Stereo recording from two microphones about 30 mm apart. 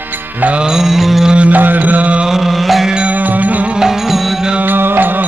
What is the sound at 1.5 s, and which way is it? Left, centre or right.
Music, right.